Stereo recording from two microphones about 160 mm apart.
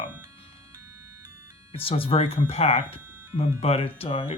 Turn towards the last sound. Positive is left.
turn(degrees=35)  # may be behind; listen again after turning